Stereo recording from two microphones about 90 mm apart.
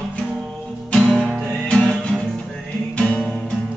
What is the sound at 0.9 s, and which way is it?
Music, 10° left (ahead or behind).